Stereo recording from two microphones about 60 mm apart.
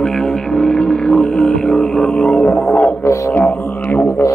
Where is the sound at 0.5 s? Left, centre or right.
Centre.